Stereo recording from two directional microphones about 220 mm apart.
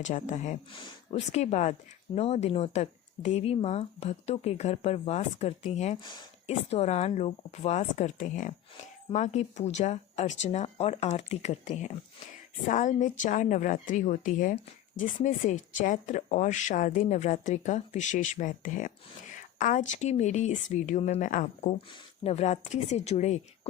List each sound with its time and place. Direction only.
0.0 s a woman's voice: 35° left (ahead or behind)